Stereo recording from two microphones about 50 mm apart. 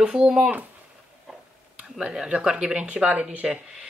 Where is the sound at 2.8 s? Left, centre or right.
Right.